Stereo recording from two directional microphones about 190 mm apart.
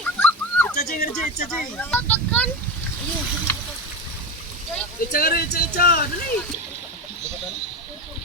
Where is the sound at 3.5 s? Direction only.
10° left (ahead or behind).